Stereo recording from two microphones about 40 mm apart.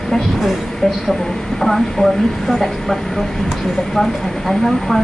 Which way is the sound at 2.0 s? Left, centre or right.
Left.